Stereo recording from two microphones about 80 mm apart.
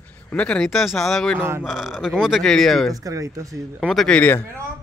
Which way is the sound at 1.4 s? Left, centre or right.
Right.